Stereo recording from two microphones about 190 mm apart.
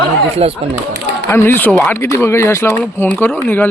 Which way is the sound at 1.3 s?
10° left (ahead or behind).